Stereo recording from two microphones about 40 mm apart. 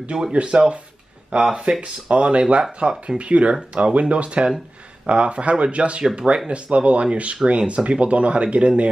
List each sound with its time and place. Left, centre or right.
0.1 s speech: right
2.8 s speech: centre
3.2 s speech: right